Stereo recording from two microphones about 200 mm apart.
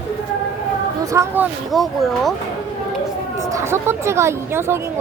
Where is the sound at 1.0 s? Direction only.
15° right (ahead or behind).